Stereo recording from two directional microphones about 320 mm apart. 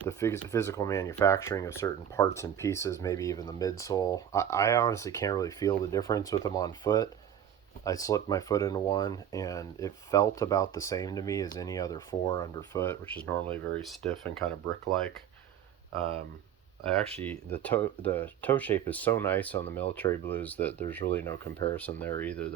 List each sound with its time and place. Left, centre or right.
0.1 s speech: centre
16.0 s speech: centre
17.2 s speech: centre